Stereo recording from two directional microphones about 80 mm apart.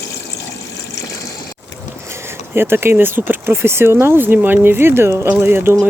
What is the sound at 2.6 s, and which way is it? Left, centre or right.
Speech, right.